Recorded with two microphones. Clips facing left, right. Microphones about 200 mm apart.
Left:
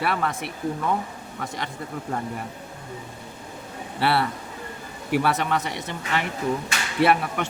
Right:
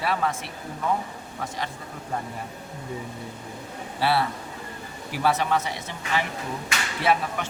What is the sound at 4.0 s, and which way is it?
Speech, 60° left (ahead or behind).